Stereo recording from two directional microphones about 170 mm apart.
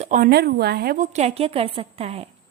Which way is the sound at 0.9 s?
40° right (ahead or behind).